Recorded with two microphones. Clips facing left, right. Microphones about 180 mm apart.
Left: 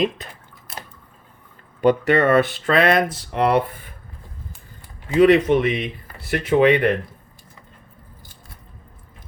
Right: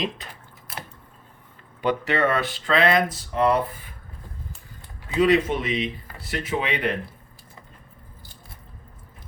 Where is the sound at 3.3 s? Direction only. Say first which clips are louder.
Left 2 dB; 70° left (ahead or behind).